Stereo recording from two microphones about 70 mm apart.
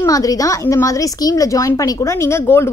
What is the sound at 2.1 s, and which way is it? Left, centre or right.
Speech, left.